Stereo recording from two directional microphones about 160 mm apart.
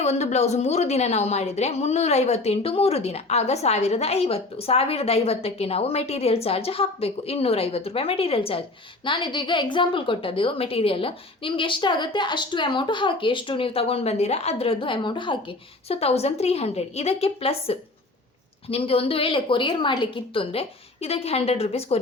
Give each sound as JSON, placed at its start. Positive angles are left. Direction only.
{"t": 0.0, "sound": "a woman's voice", "side_deg": 45}